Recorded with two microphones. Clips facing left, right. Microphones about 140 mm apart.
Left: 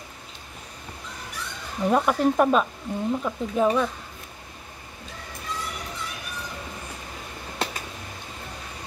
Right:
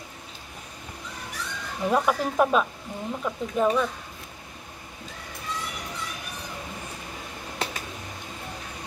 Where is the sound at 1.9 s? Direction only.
Centre (ahead or behind).